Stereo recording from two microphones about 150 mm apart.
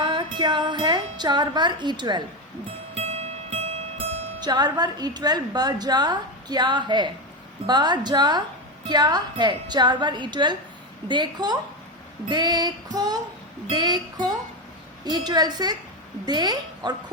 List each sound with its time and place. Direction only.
0.0 s wind chime: 30° right (ahead or behind)
2.9 s zither: 45° right (ahead or behind)
4.4 s a woman's voice: 30° right (ahead or behind)